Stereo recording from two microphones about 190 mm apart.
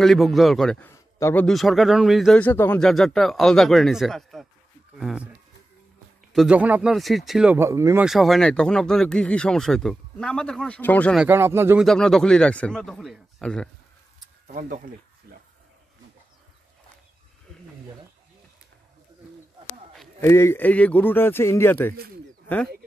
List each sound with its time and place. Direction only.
0.0 s a man's voice: centre (ahead or behind)
6.3 s a man's voice: 5° right (ahead or behind)
8.0 s a man's voice: centre (ahead or behind)
11.1 s speech: 10° right (ahead or behind)
11.8 s a man's voice: centre (ahead or behind)
14.5 s speech: 45° right (ahead or behind)
15.3 s a sound: 50° right (ahead or behind)
20.2 s speech: 15° left (ahead or behind)